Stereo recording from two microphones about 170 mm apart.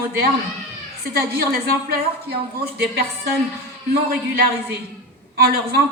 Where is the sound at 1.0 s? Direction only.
65° right (ahead or behind).